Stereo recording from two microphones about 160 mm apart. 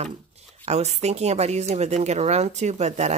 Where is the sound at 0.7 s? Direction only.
45° right (ahead or behind).